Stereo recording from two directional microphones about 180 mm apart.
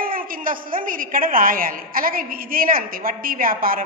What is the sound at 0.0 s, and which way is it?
A woman's voice, 50° right (ahead or behind).